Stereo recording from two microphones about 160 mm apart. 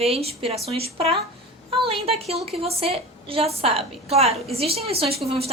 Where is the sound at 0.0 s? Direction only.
40° right (ahead or behind).